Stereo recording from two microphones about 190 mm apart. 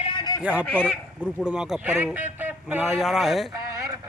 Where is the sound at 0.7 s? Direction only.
5° left (ahead or behind).